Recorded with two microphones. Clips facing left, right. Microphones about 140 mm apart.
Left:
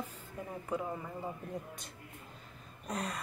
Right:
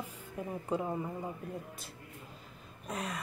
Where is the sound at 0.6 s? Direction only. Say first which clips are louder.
Right 2 dB; 25° right (ahead or behind).